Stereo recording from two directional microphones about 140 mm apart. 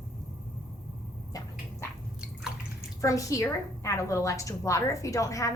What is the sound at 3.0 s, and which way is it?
A woman's voice, 25° left (ahead or behind).